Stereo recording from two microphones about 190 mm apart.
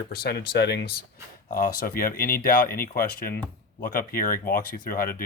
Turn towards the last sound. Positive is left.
turn(degrees=50)  # may be behind; listen again after turning